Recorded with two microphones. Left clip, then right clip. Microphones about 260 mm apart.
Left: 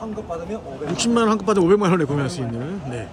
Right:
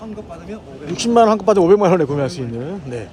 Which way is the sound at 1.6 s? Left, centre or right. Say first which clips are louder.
Right 4 dB; right.